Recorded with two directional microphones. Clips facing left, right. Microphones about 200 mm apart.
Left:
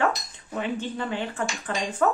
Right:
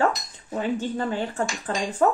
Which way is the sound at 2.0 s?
25° right (ahead or behind).